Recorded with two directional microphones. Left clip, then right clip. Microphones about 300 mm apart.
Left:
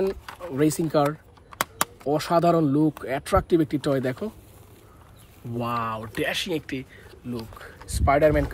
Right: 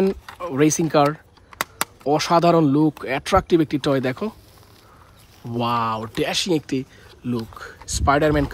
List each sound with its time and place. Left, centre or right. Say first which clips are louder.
0.5 s speech: right 5 dB; right
1.5 s a sound: right 1 dB; centre
2.0 s speech: right 5 dB; centre
5.5 s speech: right 6 dB; centre